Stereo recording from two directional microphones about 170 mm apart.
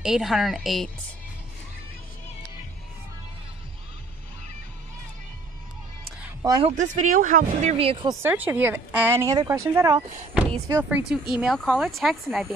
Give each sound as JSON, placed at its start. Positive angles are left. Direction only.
{"t": 0.0, "sound": "speech", "side_deg": 0}
{"t": 6.6, "sound": "speech", "side_deg": -45}
{"t": 7.7, "sound": "speech", "side_deg": -30}
{"t": 8.2, "sound": "speech", "side_deg": -10}